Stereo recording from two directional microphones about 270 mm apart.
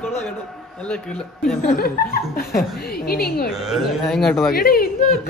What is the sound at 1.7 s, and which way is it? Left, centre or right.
Chuckle, left.